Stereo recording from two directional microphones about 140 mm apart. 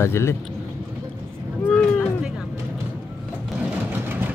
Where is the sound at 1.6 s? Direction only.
10° left (ahead or behind).